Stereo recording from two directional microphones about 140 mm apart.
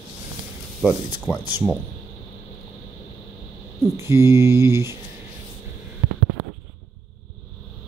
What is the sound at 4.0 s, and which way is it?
Mantra, 20° right (ahead or behind).